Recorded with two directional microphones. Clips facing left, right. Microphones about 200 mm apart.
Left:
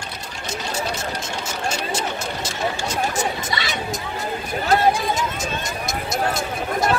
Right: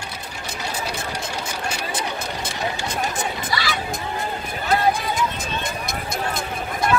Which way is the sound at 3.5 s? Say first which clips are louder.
Right 1 dB; 20° left (ahead or behind).